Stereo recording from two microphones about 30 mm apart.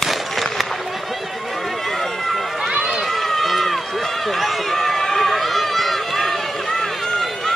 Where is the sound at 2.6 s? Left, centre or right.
Centre.